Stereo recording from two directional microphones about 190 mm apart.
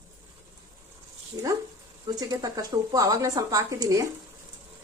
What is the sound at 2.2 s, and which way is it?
Speech, 20° right (ahead or behind).